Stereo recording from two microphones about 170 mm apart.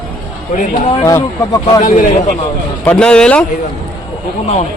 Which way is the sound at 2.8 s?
5° left (ahead or behind).